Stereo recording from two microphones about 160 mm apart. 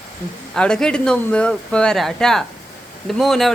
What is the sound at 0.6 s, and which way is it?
Speech, 5° left (ahead or behind).